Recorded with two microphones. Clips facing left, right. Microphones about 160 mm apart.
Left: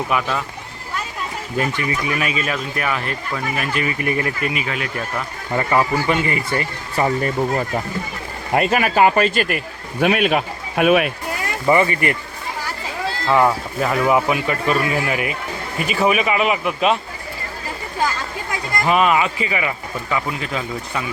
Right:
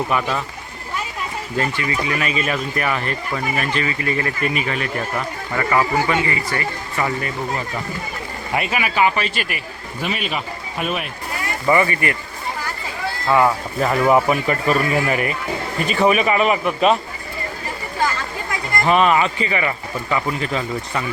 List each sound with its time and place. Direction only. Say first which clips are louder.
0.1 s speech: even; centre (ahead or behind)
1.5 s speech: left 1 dB; 15° left (ahead or behind)
2.4 s speech: right 1 dB; centre (ahead or behind)
3.8 s speech: left 1 dB; 15° left (ahead or behind)
4.6 s speech: right 2 dB; centre (ahead or behind)
5.5 s a man's voice: even; 20° left (ahead or behind)
8.7 s speech: left 3 dB; 45° left (ahead or behind); by 11.1 s 65° left (ahead or behind)
11.6 s a man's voice: left 1 dB; 20° left (ahead or behind)
13.2 s speech: even; centre (ahead or behind)
18.9 s speech: right 1 dB; 5° left (ahead or behind)